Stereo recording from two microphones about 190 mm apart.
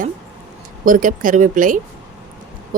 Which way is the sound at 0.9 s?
45° right (ahead or behind).